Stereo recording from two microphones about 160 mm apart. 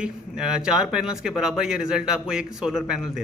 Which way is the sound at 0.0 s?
5° right (ahead or behind).